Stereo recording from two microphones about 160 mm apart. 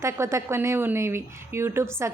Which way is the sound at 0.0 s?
15° right (ahead or behind).